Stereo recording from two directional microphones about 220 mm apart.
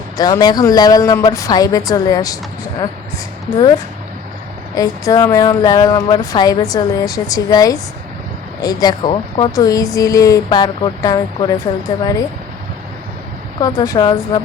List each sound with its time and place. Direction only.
0.2 s speech: 20° left (ahead or behind)
4.7 s speech: 15° left (ahead or behind)
13.6 s speech: 15° left (ahead or behind)